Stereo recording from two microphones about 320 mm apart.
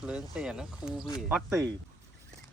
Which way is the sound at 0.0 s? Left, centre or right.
Centre.